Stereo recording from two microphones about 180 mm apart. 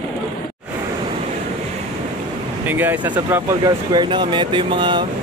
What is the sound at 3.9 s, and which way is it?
Speech, 25° right (ahead or behind).